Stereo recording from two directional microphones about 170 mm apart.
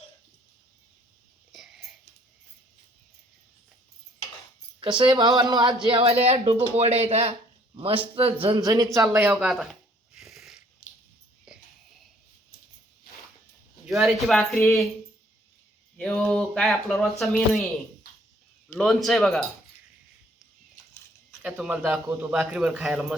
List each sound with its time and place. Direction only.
1.5 s whispering: centre (ahead or behind)
4.8 s speech: 30° right (ahead or behind)
8.6 s a man's voice: 20° right (ahead or behind)
10.2 s a sound: centre (ahead or behind)
10.8 s a sound: 60° left (ahead or behind)
11.5 s a sound: 5° right (ahead or behind)
13.8 s speech: centre (ahead or behind)
16.0 s speech: 5° left (ahead or behind)
18.7 s speech: centre (ahead or behind)
21.4 s a man's voice: 10° right (ahead or behind)